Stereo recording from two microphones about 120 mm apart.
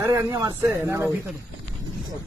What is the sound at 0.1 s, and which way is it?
Speech, 30° right (ahead or behind).